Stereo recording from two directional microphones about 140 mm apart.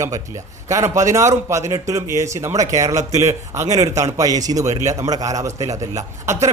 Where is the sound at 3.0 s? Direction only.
55° right (ahead or behind).